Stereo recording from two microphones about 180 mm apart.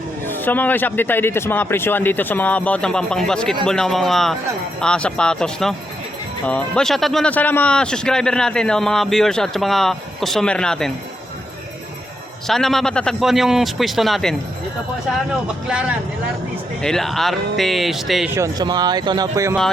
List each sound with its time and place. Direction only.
0.3 s a man's voice: 10° left (ahead or behind)
12.5 s speech: centre (ahead or behind)
16.8 s speech: centre (ahead or behind)
18.3 s speech: 20° right (ahead or behind)